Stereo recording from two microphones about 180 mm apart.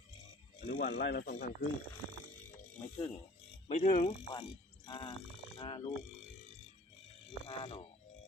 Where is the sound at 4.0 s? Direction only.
30° left (ahead or behind).